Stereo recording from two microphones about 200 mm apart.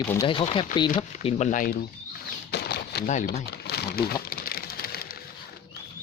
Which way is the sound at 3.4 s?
55° left (ahead or behind).